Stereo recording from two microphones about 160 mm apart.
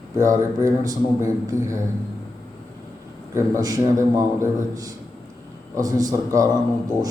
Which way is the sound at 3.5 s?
20° right (ahead or behind).